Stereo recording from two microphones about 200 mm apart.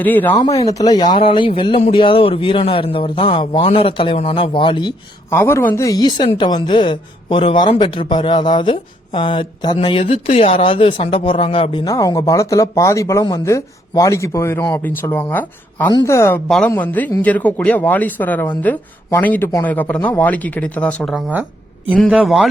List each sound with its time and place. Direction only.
0.0 s speech: 10° left (ahead or behind)